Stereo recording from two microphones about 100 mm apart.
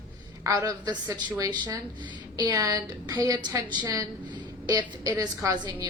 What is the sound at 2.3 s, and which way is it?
A woman's voice, 35° right (ahead or behind).